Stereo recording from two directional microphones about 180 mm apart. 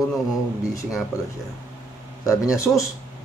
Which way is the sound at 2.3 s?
15° left (ahead or behind).